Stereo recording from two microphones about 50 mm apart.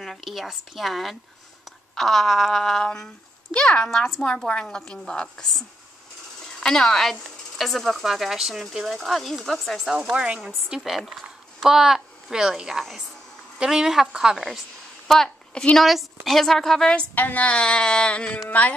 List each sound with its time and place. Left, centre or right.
0.0 s speech: centre
3.5 s a sound: centre
4.5 s a woman's voice: centre
9.8 s speech: centre
10.8 s a woman's voice: centre
15.0 s a sound: centre
15.8 s a woman's voice: centre
17.1 s speech: left
17.5 s a sound: centre
18.5 s speech: left